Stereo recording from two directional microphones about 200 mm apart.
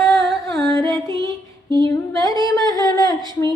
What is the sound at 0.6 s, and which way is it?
Singing, 15° left (ahead or behind).